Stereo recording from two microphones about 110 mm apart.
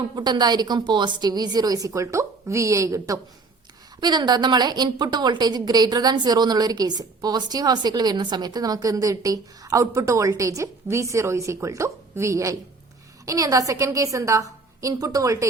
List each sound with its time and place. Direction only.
0.2 s a woman's voice: 40° right (ahead or behind)
4.0 s a woman's voice: 40° right (ahead or behind)